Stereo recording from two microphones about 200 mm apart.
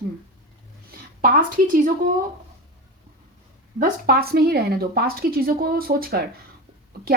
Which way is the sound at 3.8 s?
50° right (ahead or behind).